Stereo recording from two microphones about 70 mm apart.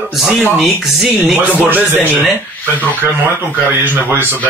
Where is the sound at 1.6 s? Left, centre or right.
Right.